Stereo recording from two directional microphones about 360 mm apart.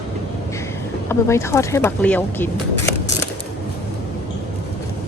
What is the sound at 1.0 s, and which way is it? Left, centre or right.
Speech, centre.